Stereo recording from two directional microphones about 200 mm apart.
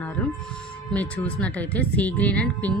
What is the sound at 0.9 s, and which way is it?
A woman's voice, 5° left (ahead or behind).